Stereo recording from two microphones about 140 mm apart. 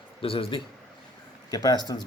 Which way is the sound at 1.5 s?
25° left (ahead or behind).